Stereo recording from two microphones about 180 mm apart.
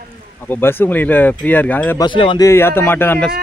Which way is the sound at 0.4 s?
10° left (ahead or behind).